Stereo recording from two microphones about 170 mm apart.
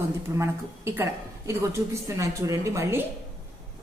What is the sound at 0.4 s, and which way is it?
A woman's voice, 15° right (ahead or behind).